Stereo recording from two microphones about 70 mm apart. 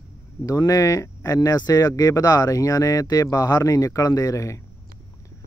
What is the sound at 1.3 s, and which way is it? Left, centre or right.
Speech, left.